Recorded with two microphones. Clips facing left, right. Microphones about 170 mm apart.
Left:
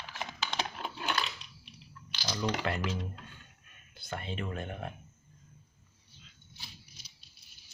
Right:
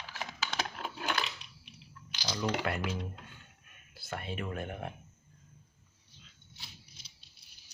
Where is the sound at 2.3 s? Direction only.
Centre (ahead or behind).